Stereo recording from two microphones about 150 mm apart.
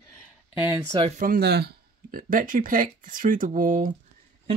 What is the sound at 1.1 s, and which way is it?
Speech, 70° right (ahead or behind).